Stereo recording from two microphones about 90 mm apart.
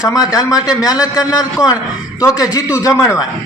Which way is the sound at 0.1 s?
45° left (ahead or behind).